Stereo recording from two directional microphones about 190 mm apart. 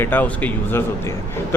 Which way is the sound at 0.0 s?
10° left (ahead or behind).